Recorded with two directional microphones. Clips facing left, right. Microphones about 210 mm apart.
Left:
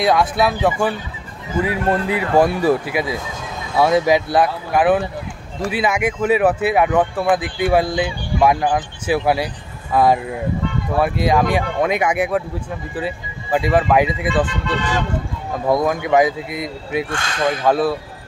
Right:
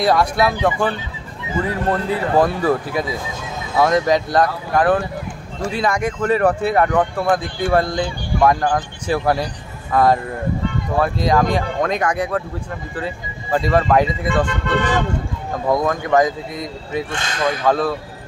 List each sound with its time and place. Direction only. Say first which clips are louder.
0.0 s speech: even; centre (ahead or behind)
14.3 s speech: right 1 dB; 50° right (ahead or behind)
15.7 s speech: left 1 dB; 10° left (ahead or behind)